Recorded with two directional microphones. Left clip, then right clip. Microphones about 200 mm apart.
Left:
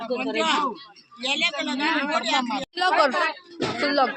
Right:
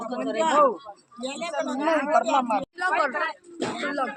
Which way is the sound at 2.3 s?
50° left (ahead or behind).